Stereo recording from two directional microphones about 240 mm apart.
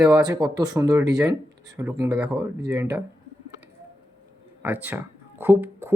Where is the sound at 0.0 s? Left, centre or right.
Centre.